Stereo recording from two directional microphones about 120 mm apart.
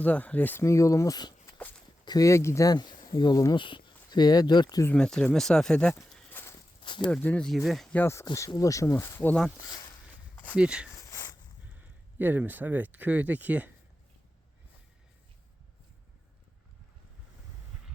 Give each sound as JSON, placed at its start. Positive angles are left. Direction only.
{"t": 0.0, "sound": "speech", "side_deg": 10}
{"t": 4.9, "sound": "speech", "side_deg": 5}
{"t": 6.4, "sound": "walk", "side_deg": 20}
{"t": 6.8, "sound": "speech", "side_deg": 40}
{"t": 7.1, "sound": "speech", "side_deg": 15}
{"t": 7.4, "sound": "speech", "side_deg": 0}
{"t": 7.9, "sound": "speech", "side_deg": 20}
{"t": 10.3, "sound": "a sound", "side_deg": 15}
{"t": 10.6, "sound": "speech", "side_deg": -10}
{"t": 10.9, "sound": "a sound", "side_deg": 30}
{"t": 11.7, "sound": "speech", "side_deg": -15}